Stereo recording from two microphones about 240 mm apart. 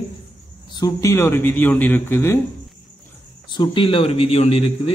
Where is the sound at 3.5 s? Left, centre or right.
Centre.